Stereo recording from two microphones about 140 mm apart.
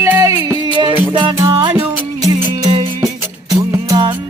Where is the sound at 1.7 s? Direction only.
20° right (ahead or behind).